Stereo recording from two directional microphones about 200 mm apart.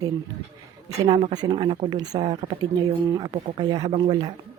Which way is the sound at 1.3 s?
20° right (ahead or behind).